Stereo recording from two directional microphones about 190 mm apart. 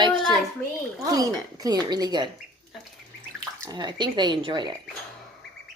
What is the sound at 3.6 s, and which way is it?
A woman's voice, 20° right (ahead or behind).